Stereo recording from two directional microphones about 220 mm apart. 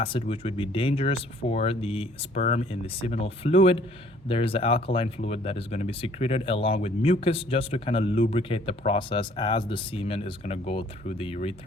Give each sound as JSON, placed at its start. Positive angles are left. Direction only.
{"t": 0.0, "sound": "speech", "side_deg": 25}